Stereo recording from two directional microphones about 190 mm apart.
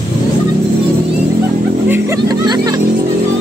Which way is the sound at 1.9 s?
15° right (ahead or behind).